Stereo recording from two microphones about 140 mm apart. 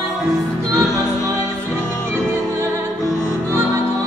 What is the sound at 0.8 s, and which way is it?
Music, 25° right (ahead or behind).